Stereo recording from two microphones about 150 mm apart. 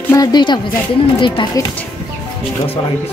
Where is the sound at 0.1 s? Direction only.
25° left (ahead or behind).